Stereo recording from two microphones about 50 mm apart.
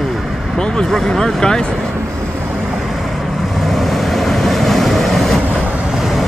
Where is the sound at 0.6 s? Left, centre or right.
Centre.